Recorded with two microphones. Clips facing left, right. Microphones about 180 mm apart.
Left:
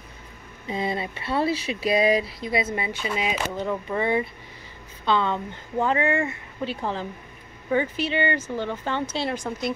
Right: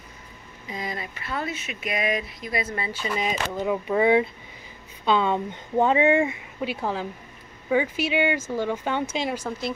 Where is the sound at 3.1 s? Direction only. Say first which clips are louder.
Right 1 dB; 5° left (ahead or behind).